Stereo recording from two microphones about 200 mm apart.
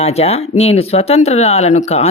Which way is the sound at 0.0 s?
30° left (ahead or behind).